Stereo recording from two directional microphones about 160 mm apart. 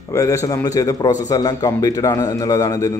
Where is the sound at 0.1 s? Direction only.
20° left (ahead or behind).